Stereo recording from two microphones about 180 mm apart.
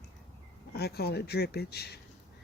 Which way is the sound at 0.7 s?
65° left (ahead or behind).